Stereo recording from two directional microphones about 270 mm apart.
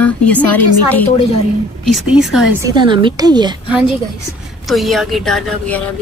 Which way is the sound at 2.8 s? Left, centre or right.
Centre.